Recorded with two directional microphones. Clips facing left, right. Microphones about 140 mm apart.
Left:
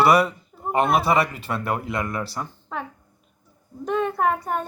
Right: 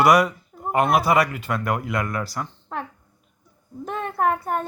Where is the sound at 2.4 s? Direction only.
5° left (ahead or behind).